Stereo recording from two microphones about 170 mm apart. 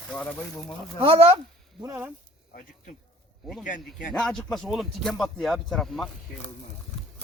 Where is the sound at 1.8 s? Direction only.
15° right (ahead or behind).